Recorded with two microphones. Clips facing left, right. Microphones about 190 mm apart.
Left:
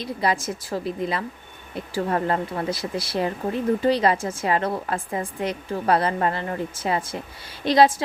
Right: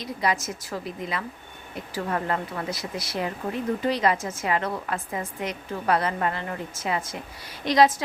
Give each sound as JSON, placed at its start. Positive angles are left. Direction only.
{"t": 0.0, "sound": "a woman's voice", "side_deg": 30}